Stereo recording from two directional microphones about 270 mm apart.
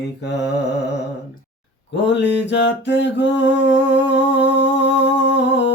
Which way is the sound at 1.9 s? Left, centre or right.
Left.